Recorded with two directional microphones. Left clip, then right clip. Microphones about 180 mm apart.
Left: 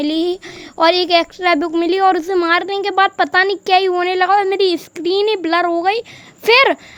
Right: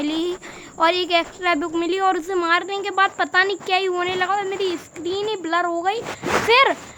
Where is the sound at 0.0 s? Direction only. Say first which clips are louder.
Left 6 dB; 30° left (ahead or behind).